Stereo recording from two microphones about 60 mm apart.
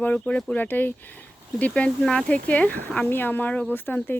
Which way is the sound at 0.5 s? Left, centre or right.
Left.